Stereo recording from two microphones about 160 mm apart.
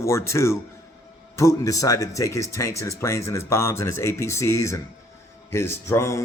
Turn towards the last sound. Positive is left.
turn(degrees=20)  # may be behind; listen again after turning